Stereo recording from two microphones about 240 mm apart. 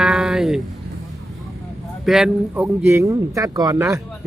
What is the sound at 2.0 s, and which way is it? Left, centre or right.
A man's voice, centre.